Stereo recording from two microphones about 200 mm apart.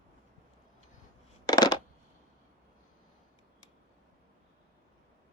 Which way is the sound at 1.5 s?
20° left (ahead or behind).